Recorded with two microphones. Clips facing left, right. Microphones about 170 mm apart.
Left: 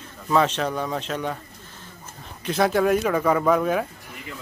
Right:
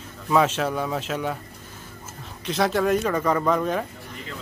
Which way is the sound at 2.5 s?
Centre (ahead or behind).